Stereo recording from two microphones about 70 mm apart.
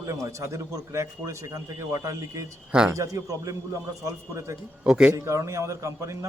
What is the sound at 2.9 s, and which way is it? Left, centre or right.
A man's voice, right.